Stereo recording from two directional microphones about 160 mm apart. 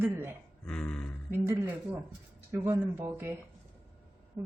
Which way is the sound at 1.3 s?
15° right (ahead or behind).